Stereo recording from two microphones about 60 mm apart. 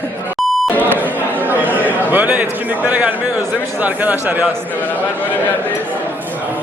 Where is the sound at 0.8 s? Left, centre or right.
Right.